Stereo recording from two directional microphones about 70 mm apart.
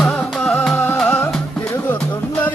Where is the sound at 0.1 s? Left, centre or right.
Centre.